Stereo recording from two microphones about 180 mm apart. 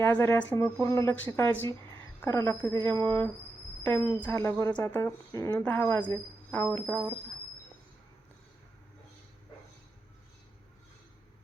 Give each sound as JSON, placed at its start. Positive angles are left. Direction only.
{"t": 0.0, "sound": "speech", "side_deg": 15}